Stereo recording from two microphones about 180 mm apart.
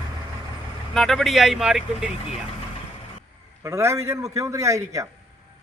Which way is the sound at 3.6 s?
15° right (ahead or behind).